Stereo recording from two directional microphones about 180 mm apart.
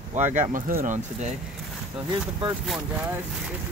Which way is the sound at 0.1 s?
40° right (ahead or behind).